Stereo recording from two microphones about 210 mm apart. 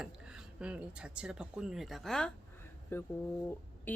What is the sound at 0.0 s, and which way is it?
Speech, 5° right (ahead or behind).